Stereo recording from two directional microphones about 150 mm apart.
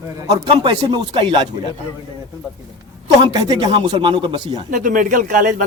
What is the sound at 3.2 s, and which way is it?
Speech, 30° right (ahead or behind).